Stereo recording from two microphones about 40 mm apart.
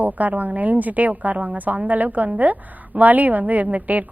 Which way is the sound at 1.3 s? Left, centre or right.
Right.